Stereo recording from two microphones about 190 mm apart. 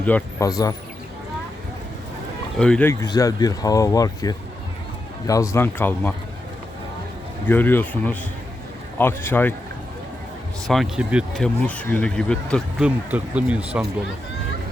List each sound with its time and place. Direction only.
0.0 s speech: 10° left (ahead or behind)
0.4 s speech: 20° left (ahead or behind)
2.6 s speech: 5° left (ahead or behind)
3.0 s speech: 20° left (ahead or behind)
7.4 s speech: 10° left (ahead or behind)
10.7 s speech: centre (ahead or behind)
12.8 s speech: 5° right (ahead or behind)